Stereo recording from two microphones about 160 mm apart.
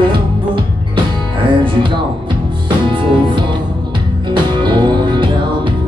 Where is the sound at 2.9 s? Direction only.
30° right (ahead or behind).